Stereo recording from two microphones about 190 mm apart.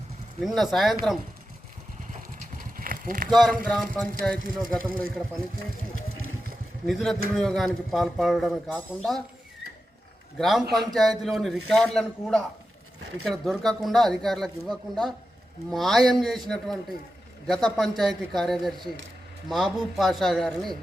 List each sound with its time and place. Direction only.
0.4 s a man's voice: centre (ahead or behind)
2.1 s clip-clop: 45° right (ahead or behind)
3.2 s a man's voice: centre (ahead or behind)
6.8 s a man's voice: centre (ahead or behind)
10.3 s a man's voice: centre (ahead or behind)
17.4 s a man's voice: centre (ahead or behind)